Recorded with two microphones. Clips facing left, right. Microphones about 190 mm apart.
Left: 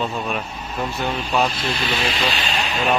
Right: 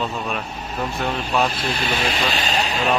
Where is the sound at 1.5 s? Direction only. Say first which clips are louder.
Even; 50° right (ahead or behind).